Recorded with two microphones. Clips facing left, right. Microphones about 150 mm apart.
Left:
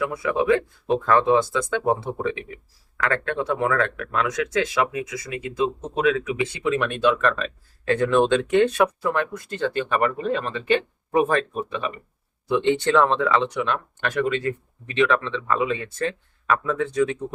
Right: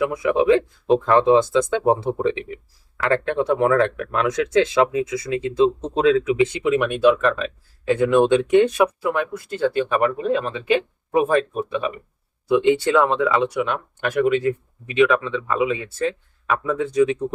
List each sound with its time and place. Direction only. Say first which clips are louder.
0.0 s speech: right 4 dB; 20° right (ahead or behind)
8.3 s speech: right 3 dB; 15° right (ahead or behind)
16.7 s speech: right 4 dB; 15° right (ahead or behind)